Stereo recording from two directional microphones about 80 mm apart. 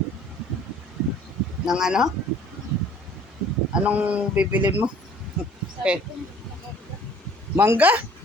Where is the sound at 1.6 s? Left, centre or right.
Centre.